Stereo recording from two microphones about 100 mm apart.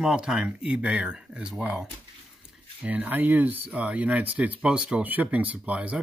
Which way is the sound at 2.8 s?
15° right (ahead or behind).